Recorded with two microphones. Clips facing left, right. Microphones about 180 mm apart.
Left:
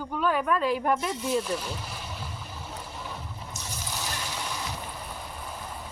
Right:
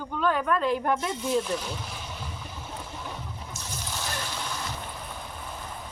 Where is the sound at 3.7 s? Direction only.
Centre (ahead or behind).